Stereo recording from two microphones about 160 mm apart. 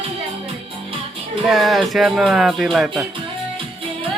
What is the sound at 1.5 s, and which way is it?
Speech, centre (ahead or behind).